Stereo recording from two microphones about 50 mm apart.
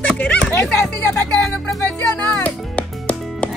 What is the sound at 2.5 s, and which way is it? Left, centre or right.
Music, left.